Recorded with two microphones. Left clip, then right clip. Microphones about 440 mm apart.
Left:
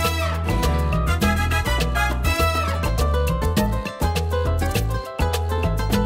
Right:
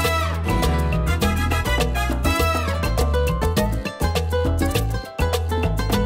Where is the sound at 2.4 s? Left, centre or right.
Right.